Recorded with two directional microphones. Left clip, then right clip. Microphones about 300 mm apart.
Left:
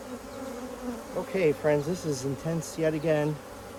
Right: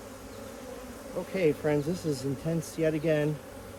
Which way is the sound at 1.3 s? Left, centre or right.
Left.